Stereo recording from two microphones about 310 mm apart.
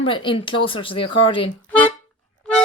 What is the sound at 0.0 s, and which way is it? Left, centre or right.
Speech, centre.